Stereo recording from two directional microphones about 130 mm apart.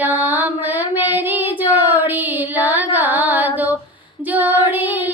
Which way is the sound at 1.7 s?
15° right (ahead or behind).